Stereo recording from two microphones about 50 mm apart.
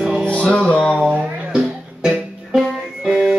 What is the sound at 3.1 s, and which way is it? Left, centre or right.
Music, centre.